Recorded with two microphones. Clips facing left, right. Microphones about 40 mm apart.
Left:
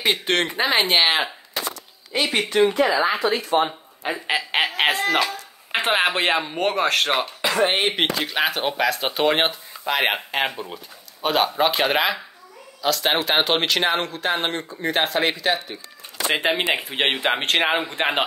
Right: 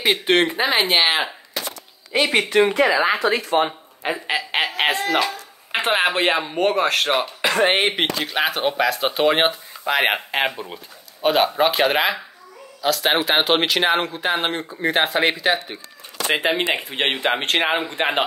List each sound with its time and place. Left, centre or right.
0.0 s speech: centre
2.1 s speech: right
2.5 s speech: right
2.9 s speech: right
3.2 s speech: right
4.1 s a sound: centre
5.1 s speech: centre
7.4 s speech: right
7.9 s speech: centre
16.3 s speech: centre